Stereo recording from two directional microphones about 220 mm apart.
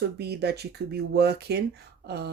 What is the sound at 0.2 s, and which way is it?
Speech, 50° right (ahead or behind).